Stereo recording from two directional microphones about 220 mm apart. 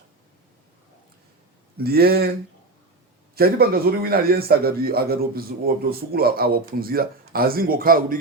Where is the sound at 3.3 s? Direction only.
45° right (ahead or behind).